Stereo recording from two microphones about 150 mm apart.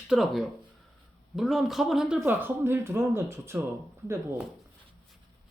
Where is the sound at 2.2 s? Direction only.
15° right (ahead or behind).